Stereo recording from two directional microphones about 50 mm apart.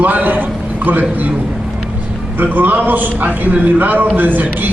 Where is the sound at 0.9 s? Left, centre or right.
Right.